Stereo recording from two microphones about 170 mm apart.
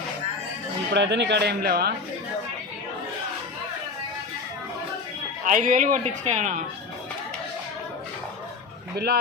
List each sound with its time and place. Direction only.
0.9 s speech: 90° right; by 1.9 s 65° right (ahead or behind)
5.5 s speech: 50° right (ahead or behind)